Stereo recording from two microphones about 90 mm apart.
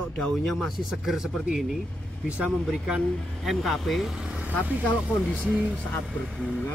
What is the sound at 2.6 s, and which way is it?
Speech, 5° right (ahead or behind).